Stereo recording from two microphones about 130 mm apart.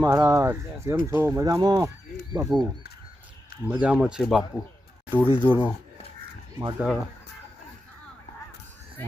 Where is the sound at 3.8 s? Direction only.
10° right (ahead or behind).